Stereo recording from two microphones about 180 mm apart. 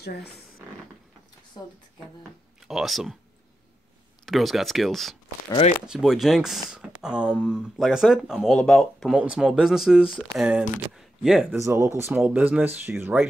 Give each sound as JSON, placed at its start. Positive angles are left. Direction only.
{"t": 0.0, "sound": "speech", "side_deg": 65}
{"t": 2.7, "sound": "speech", "side_deg": 0}
{"t": 4.3, "sound": "speech", "side_deg": 0}
{"t": 11.5, "sound": "speech", "side_deg": -15}